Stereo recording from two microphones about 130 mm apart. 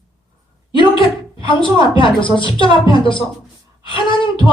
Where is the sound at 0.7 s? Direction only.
40° left (ahead or behind).